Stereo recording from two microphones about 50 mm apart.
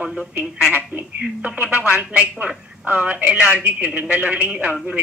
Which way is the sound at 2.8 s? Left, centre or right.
Right.